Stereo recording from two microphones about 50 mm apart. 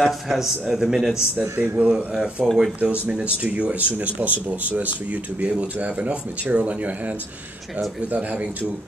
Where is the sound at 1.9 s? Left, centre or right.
Centre.